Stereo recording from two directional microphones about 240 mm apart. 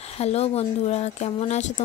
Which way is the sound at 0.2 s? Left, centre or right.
Left.